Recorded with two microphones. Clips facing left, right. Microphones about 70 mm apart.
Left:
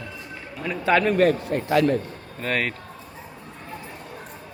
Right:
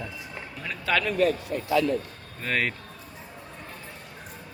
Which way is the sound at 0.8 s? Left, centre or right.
Left.